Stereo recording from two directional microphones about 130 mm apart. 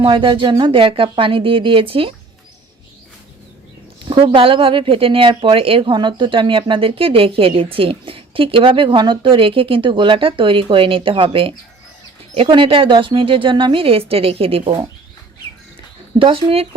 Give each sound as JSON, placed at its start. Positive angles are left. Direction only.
{"t": 0.0, "sound": "speech", "side_deg": -40}
{"t": 4.1, "sound": "speech", "side_deg": -40}
{"t": 16.1, "sound": "speech", "side_deg": -45}